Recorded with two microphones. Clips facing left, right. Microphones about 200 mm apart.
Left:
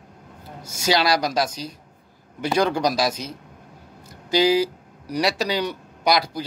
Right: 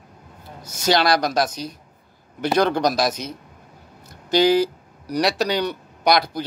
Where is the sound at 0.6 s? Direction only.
10° left (ahead or behind).